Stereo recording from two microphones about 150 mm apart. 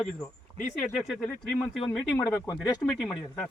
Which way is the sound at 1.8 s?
10° left (ahead or behind).